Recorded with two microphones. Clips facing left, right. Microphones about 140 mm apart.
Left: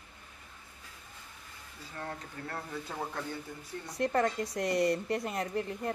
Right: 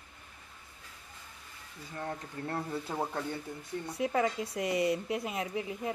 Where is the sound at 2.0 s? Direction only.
25° right (ahead or behind).